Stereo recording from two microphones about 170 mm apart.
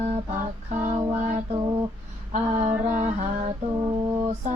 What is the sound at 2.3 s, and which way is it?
Female singing, 45° right (ahead or behind).